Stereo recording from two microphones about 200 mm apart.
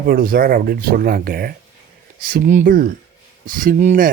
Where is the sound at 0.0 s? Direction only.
50° right (ahead or behind).